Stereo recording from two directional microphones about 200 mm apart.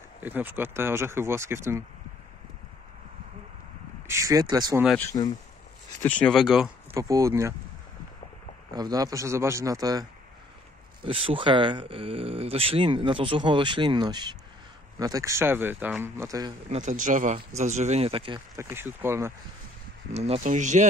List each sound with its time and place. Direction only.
0.2 s speech: 10° right (ahead or behind)
4.1 s speech: 15° right (ahead or behind)
4.8 s speech: 10° left (ahead or behind)
7.0 s speech: 15° right (ahead or behind)
8.7 s speech: 20° right (ahead or behind)
11.1 s speech: 25° right (ahead or behind)
16.6 s speech: 35° right (ahead or behind)
18.6 s speech: 10° right (ahead or behind)
20.1 s speech: 35° right (ahead or behind)